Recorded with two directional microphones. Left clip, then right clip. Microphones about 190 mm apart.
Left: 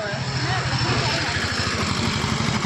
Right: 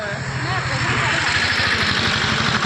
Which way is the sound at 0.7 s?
45° left (ahead or behind).